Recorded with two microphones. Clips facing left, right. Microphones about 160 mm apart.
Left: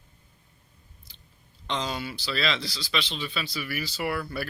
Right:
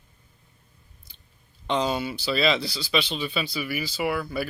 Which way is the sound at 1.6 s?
15° right (ahead or behind).